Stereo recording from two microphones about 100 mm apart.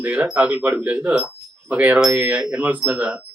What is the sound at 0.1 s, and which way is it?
Speech, 15° right (ahead or behind).